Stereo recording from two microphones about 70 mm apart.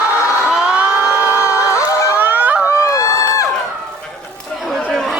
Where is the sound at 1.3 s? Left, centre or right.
Left.